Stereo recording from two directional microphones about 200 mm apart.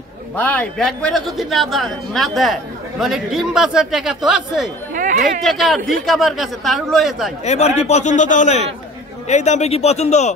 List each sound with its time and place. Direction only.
0.4 s a woman's voice: 5° left (ahead or behind)
4.9 s a sound: 40° right (ahead or behind)
5.4 s a woman's voice: centre (ahead or behind)
7.4 s a man's voice: 35° left (ahead or behind)